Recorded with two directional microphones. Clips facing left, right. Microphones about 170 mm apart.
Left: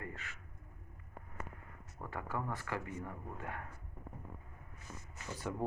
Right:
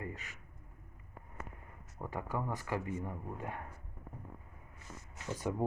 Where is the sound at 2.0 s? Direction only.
15° right (ahead or behind).